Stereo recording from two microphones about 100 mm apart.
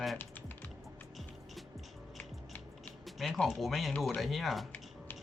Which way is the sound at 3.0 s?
Centre (ahead or behind).